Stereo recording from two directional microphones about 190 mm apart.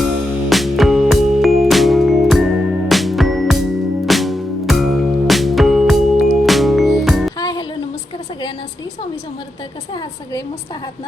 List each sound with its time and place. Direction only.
0.5 s music: centre (ahead or behind)
7.3 s music: 20° left (ahead or behind)